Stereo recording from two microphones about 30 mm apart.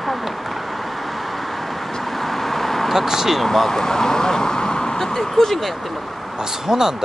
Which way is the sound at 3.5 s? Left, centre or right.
Centre.